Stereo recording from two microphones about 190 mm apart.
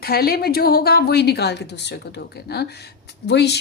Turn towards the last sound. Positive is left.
turn(degrees=60)  # may be behind; listen again after turning